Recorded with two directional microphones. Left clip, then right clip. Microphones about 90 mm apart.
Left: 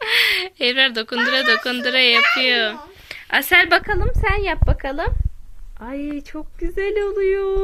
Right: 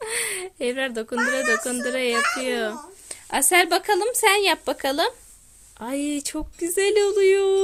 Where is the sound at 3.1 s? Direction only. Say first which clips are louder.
Left 5 dB; 35° right (ahead or behind).